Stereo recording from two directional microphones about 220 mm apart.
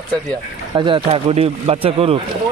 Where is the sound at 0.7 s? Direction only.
20° right (ahead or behind).